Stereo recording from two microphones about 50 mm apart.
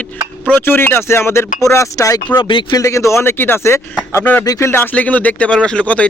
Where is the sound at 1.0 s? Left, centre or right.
Left.